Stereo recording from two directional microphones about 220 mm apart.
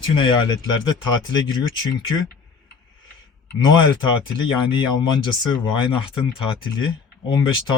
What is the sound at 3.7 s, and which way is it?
Speech, 20° left (ahead or behind).